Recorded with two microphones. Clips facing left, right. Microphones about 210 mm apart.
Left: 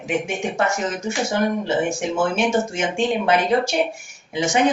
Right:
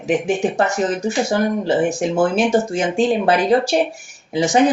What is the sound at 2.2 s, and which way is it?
Speech, 35° right (ahead or behind).